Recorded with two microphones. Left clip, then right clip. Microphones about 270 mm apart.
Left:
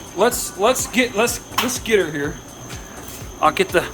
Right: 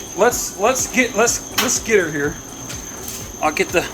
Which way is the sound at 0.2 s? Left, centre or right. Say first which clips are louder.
Right 1 dB; left.